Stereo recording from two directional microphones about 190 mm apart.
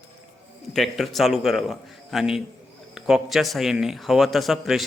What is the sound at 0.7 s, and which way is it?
Speech, centre (ahead or behind).